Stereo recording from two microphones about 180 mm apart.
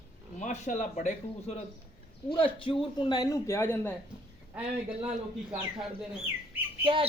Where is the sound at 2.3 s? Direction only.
30° left (ahead or behind); by 3.9 s 15° left (ahead or behind).